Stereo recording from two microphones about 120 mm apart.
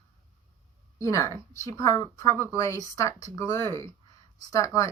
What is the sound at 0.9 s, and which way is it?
A woman's voice, 25° left (ahead or behind).